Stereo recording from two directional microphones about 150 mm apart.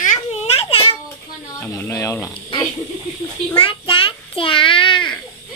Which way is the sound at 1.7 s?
20° left (ahead or behind).